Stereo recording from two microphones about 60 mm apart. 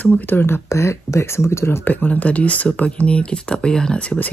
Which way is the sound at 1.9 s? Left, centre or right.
Left.